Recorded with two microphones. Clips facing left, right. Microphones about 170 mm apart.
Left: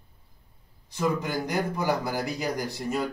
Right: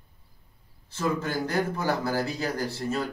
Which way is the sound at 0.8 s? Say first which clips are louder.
Left 1 dB; 15° left (ahead or behind).